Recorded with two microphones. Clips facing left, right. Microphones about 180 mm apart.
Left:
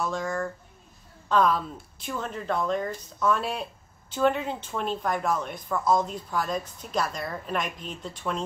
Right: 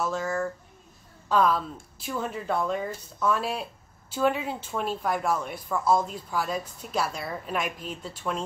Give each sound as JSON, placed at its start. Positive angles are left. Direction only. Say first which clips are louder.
{"t": 0.0, "sound": "a woman's voice", "louder": "right 1 dB", "side_deg": -5}